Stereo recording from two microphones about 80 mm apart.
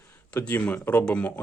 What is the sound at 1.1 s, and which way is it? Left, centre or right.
Speech, centre.